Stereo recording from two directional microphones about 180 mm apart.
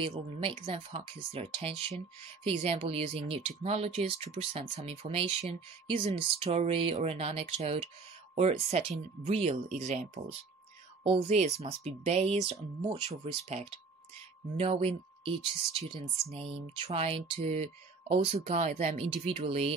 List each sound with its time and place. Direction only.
0.0 s speech: 30° right (ahead or behind)
14.6 s speech: 35° right (ahead or behind)